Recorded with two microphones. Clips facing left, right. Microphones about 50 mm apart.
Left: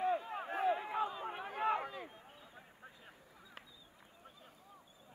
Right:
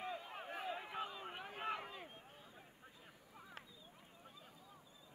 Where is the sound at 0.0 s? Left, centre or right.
Left.